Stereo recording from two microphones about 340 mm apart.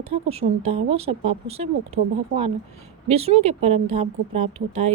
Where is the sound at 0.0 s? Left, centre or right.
Centre.